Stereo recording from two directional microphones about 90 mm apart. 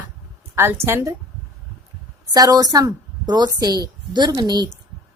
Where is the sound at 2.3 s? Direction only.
45° right (ahead or behind).